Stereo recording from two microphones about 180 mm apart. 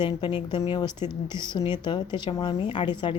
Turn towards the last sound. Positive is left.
turn(degrees=25)  # may be behind; listen again after turning